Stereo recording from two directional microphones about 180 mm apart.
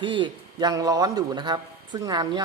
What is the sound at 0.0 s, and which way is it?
A man's voice, 25° right (ahead or behind).